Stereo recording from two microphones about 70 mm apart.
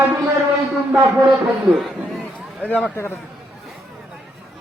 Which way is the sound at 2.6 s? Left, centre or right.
Left.